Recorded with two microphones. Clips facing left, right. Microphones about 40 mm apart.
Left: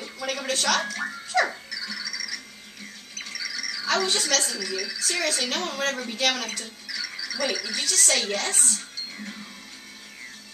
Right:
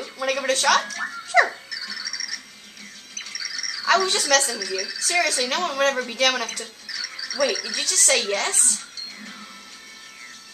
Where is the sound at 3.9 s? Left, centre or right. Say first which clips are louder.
Right 5 dB; right.